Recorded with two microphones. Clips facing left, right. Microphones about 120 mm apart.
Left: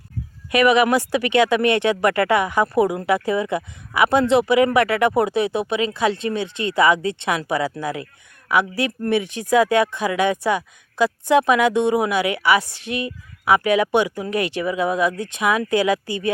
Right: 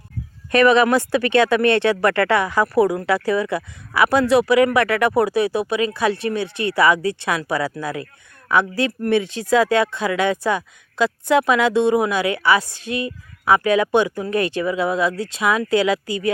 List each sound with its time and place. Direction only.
0.5 s speech: 15° left (ahead or behind)